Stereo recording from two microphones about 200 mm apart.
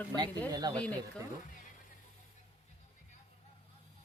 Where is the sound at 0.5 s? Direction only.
20° right (ahead or behind).